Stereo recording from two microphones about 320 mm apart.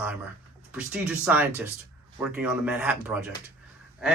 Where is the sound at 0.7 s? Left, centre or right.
Centre.